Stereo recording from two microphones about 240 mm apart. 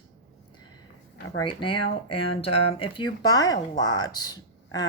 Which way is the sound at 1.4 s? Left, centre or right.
Centre.